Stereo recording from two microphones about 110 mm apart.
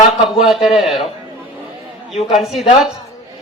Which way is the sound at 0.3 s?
Centre (ahead or behind).